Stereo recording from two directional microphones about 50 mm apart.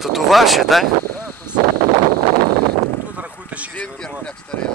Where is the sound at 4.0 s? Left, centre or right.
Centre.